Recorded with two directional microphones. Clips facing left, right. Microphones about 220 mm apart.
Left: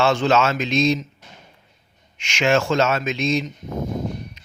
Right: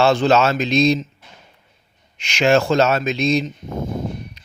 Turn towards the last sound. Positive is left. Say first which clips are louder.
# even
turn(degrees=-35)  # may be behind; listen again after turning